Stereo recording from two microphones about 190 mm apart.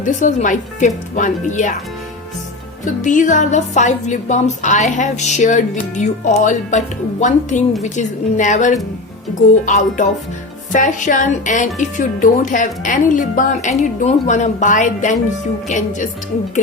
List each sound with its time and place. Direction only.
0.0 s speech: 40° left (ahead or behind)
2.8 s speech: 40° left (ahead or behind)